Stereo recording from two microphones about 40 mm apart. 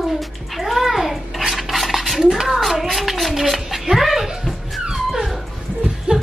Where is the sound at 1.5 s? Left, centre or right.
Centre.